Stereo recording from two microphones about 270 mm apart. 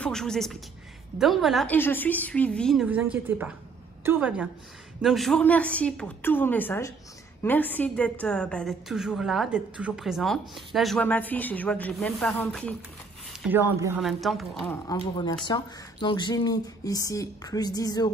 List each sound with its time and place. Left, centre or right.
0.0 s a woman's voice: centre
14.9 s speech: centre